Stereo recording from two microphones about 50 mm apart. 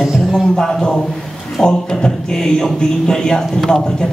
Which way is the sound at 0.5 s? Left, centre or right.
Centre.